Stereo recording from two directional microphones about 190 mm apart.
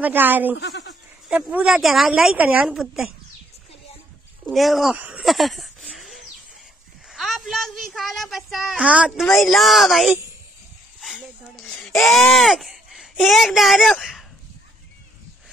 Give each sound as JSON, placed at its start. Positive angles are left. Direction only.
{"t": 0.0, "sound": "speech", "side_deg": -10}
{"t": 0.6, "sound": "bleat", "side_deg": 65}
{"t": 1.3, "sound": "a woman's voice", "side_deg": -5}
{"t": 4.5, "sound": "a sound", "side_deg": 0}
{"t": 7.1, "sound": "a woman's voice", "side_deg": 0}
{"t": 11.0, "sound": "a sound", "side_deg": 0}
{"t": 12.0, "sound": "speech", "side_deg": 0}